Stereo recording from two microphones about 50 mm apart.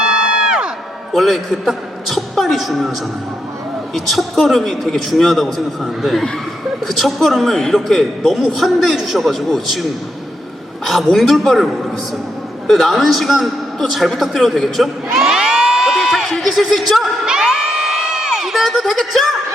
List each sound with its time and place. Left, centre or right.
0.0 s crowd: centre
1.1 s a man's voice: centre
3.9 s a man's voice: centre
10.8 s a man's voice: centre
15.2 s crowd: centre
16.3 s a man's voice: centre
17.6 s crowd: centre
18.7 s a man's voice: centre